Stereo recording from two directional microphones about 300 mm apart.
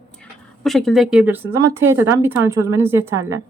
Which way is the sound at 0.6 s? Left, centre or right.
Centre.